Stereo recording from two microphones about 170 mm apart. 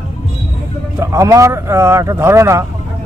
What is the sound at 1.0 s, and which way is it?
Speech, 20° right (ahead or behind).